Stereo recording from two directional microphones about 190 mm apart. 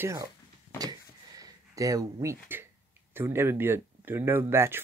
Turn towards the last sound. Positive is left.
turn(degrees=-15)  # may be behind; listen again after turning